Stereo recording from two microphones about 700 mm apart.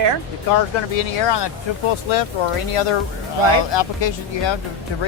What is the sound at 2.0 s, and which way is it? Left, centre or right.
Speech, left.